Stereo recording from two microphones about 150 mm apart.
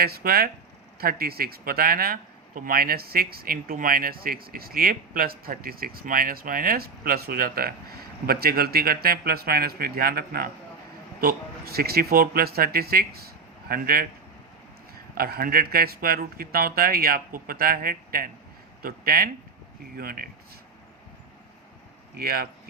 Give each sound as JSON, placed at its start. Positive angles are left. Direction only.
{"t": 0.0, "sound": "speech", "side_deg": -85}
{"t": 13.7, "sound": "speech", "side_deg": -80}
{"t": 15.1, "sound": "speech", "side_deg": -85}
{"t": 22.2, "sound": "speech", "side_deg": -90}